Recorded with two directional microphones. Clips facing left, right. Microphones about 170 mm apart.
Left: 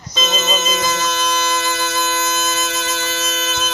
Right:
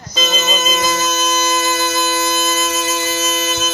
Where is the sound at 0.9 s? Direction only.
40° right (ahead or behind).